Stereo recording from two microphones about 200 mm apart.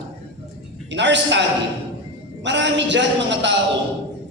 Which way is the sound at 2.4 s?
60° right (ahead or behind).